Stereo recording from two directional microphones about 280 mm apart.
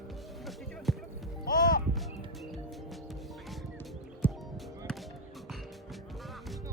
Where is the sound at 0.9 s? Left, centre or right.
Centre.